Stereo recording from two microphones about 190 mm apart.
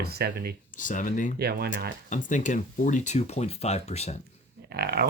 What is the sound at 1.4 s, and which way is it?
Speech, 55° right (ahead or behind).